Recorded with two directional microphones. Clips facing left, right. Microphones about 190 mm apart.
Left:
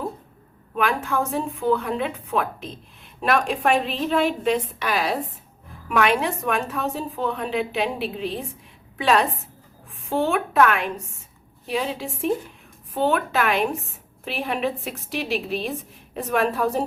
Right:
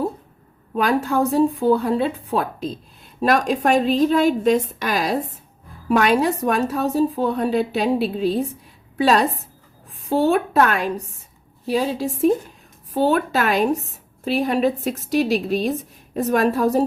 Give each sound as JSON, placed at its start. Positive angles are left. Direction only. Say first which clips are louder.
{"t": 0.8, "sound": "a woman's voice", "louder": "right 5 dB", "side_deg": -35}